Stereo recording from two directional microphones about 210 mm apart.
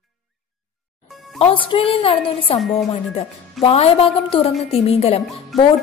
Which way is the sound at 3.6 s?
25° left (ahead or behind).